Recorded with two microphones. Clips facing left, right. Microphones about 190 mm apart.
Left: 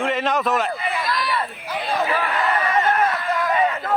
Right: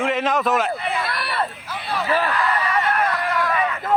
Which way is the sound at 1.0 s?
65° right (ahead or behind).